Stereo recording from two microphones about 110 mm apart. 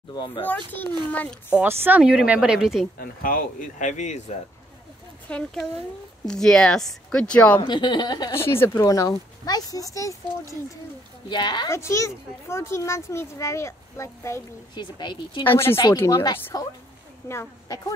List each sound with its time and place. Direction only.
0.1 s speech: 40° left (ahead or behind)
1.1 s speech: 15° left (ahead or behind)
1.6 s speech: 20° right (ahead or behind)
3.8 s speech: 90° left
5.3 s speech: 5° left (ahead or behind)
7.5 s speech: 45° left (ahead or behind)
8.4 s speech: 20° left (ahead or behind)
11.2 s speech: 40° left (ahead or behind)
11.7 s a child's voice: 25° left (ahead or behind)
14.7 s speech: 45° left (ahead or behind)
15.4 s a child's voice: 20° left (ahead or behind)